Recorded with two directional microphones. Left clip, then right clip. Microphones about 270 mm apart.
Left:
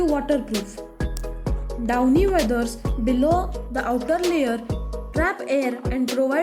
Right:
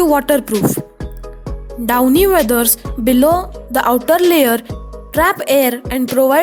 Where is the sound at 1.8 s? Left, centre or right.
Right.